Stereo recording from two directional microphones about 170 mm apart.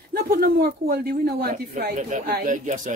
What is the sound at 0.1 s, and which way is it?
Speech, 60° right (ahead or behind).